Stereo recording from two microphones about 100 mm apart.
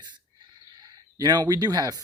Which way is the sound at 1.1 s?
40° right (ahead or behind).